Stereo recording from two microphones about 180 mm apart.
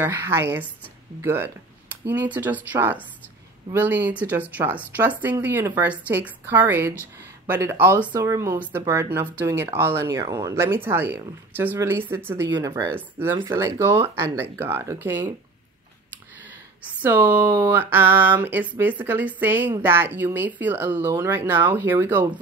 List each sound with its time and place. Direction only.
0.0 s speech: 10° right (ahead or behind)
16.8 s speech: 10° right (ahead or behind)